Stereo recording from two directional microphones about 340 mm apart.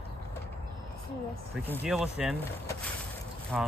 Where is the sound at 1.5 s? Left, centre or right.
Centre.